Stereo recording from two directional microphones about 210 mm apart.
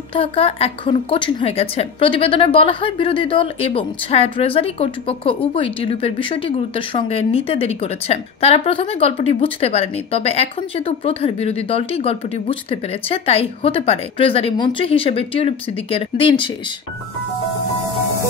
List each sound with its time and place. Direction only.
0.1 s a woman's voice: 25° left (ahead or behind)